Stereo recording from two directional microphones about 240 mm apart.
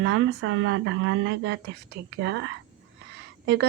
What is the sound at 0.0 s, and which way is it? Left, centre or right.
A woman's voice, right.